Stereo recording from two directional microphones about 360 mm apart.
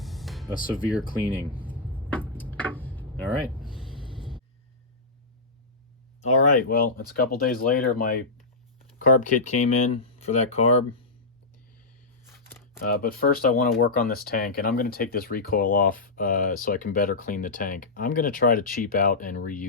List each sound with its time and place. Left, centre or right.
0.0 s music: centre
0.7 s speech: centre
1.4 s a sound: centre
6.2 s speech: left
12.8 s speech: left